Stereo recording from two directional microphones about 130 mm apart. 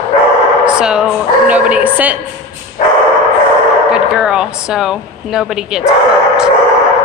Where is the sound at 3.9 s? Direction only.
5° right (ahead or behind).